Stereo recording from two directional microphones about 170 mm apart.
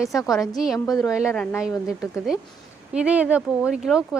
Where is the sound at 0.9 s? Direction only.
20° left (ahead or behind).